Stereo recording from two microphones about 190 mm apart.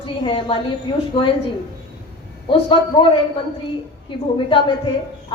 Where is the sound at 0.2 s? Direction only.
25° left (ahead or behind).